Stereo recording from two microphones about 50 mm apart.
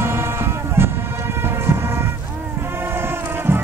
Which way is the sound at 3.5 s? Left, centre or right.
Right.